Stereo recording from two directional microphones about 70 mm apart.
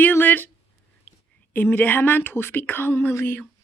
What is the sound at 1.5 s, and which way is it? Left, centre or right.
Female singing, left.